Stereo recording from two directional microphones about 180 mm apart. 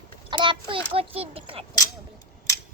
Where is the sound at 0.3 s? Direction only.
25° right (ahead or behind).